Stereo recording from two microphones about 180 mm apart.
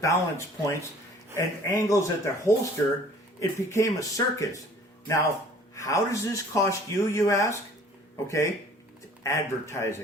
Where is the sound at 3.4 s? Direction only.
15° left (ahead or behind).